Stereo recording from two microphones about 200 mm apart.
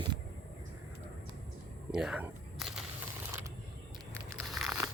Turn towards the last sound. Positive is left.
turn(degrees=0)  # may be behind; listen again after turning